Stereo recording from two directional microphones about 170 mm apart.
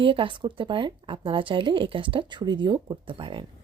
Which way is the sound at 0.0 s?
30° right (ahead or behind).